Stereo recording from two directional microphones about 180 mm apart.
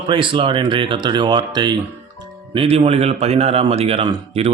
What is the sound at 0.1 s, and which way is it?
A man's voice, 30° right (ahead or behind).